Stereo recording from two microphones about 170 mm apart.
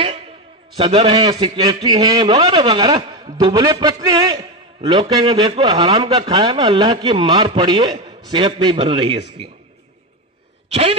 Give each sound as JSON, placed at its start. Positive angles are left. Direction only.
{"t": 0.7, "sound": "a man's voice", "side_deg": -30}
{"t": 10.7, "sound": "speech", "side_deg": -35}